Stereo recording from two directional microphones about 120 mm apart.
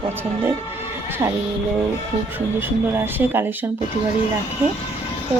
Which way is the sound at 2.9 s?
15° right (ahead or behind).